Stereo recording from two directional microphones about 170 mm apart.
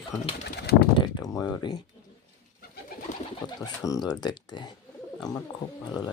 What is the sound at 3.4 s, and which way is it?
Speech, 20° left (ahead or behind).